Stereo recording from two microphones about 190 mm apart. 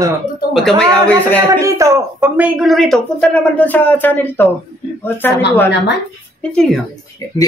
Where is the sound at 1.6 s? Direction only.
15° right (ahead or behind); by 5.7 s 10° left (ahead or behind).